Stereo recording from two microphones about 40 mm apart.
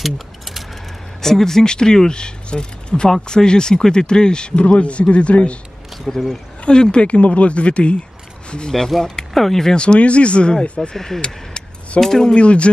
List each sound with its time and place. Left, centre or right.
0.0 s a sound: centre
1.2 s speech: centre; by 5.6 s left
6.0 s speech: centre
6.6 s speech: left
9.3 s speech: centre
9.8 s speech: left
11.1 s a sound: left
12.0 s speech: centre
12.4 s speech: left